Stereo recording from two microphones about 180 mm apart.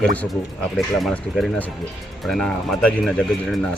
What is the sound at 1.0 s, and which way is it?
Speech, centre (ahead or behind).